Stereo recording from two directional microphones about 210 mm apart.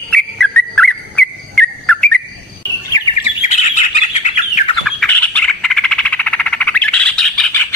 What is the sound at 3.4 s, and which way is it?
Bird, 35° left (ahead or behind).